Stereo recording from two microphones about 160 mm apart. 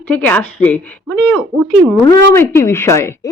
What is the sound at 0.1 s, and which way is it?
A woman's voice, 10° left (ahead or behind).